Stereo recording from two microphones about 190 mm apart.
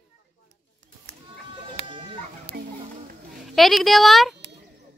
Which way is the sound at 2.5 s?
65° right (ahead or behind).